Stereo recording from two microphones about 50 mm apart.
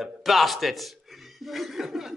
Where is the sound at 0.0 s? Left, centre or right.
Centre.